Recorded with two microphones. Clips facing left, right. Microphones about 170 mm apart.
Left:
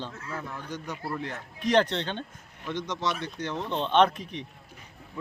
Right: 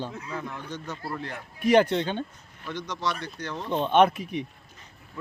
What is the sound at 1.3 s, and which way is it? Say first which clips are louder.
Speech: right 4 dB; 10° right (ahead or behind).